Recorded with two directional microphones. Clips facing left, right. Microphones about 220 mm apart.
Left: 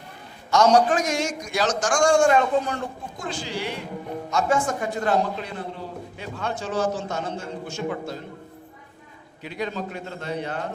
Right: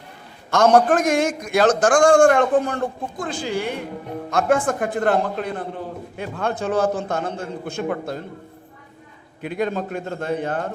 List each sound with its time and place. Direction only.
0.5 s a man's voice: 55° right (ahead or behind)
9.4 s a man's voice: 50° right (ahead or behind)